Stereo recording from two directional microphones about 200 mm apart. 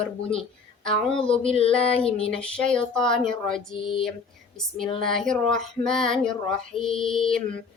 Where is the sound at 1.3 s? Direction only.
30° left (ahead or behind).